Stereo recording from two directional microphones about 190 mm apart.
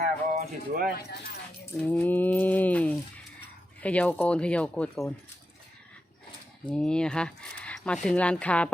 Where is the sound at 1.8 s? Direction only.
10° left (ahead or behind).